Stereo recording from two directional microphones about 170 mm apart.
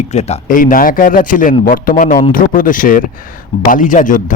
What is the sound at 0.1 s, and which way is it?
A man's voice, 40° left (ahead or behind).